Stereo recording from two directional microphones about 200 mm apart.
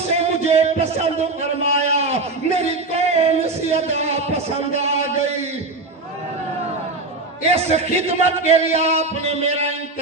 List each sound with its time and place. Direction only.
0.1 s music: 30° right (ahead or behind)
7.5 s a man's voice: 35° right (ahead or behind)